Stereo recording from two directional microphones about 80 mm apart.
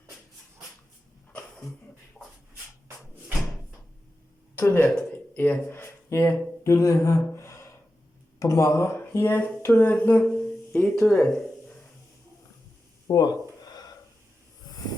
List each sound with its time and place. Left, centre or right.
4.5 s speech: left
10.8 s speech: centre
13.1 s speech: left
14.7 s hiss: left